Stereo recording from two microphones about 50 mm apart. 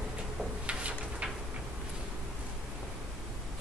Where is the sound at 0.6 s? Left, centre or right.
Right.